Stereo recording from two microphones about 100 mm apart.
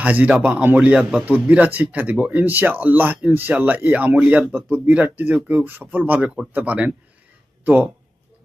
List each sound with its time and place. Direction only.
0.0 s speech: 15° right (ahead or behind)
6.1 s speech: 5° right (ahead or behind)